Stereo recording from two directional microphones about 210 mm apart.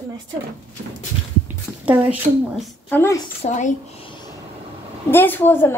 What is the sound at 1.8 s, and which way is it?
Speech, 5° right (ahead or behind).